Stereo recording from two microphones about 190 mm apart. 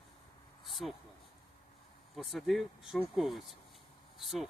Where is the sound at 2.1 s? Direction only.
Centre (ahead or behind).